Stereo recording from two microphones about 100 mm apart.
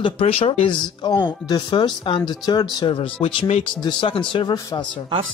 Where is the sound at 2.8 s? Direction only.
60° left (ahead or behind).